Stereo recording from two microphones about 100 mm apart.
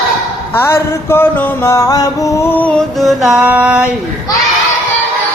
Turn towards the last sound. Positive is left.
turn(degrees=-10)  # may be behind; listen again after turning